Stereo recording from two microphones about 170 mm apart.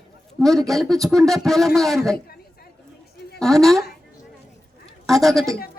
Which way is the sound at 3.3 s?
Centre (ahead or behind).